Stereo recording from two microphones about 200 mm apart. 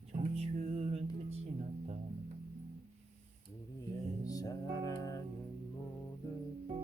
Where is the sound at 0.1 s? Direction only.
35° right (ahead or behind).